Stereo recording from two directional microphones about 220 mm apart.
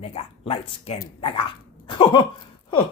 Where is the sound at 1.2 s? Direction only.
20° left (ahead or behind).